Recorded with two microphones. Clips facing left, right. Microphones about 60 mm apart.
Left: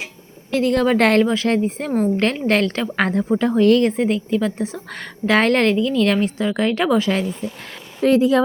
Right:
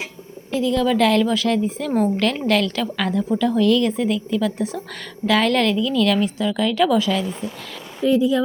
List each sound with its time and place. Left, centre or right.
0.5 s a woman's voice: left
1.2 s a woman's voice: left
8.0 s speech: left